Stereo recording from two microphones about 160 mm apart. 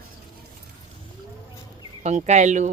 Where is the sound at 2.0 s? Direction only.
45° right (ahead or behind).